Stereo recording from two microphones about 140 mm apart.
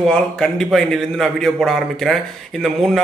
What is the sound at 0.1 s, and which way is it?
A man's voice, 5° left (ahead or behind).